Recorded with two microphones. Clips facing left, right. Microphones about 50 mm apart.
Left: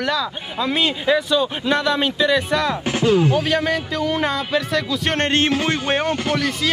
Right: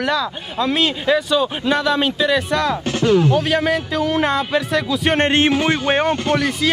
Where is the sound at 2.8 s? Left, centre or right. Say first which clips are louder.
Right 1 dB; centre.